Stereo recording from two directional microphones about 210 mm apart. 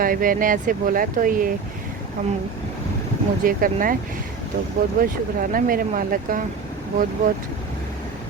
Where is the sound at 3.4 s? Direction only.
40° right (ahead or behind).